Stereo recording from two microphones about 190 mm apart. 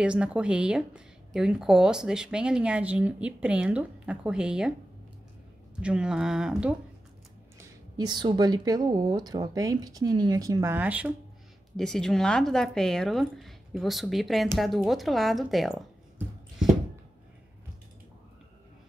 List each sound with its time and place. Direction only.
0.0 s a woman's voice: 5° right (ahead or behind)
5.8 s a woman's voice: 5° right (ahead or behind)
7.5 s speech: 20° right (ahead or behind)
11.7 s a woman's voice: 5° left (ahead or behind)